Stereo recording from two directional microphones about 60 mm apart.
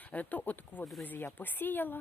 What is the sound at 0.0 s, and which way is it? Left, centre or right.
Speech, left.